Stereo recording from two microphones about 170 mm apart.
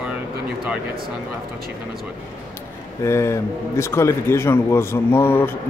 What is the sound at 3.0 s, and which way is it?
A man's voice, 15° left (ahead or behind).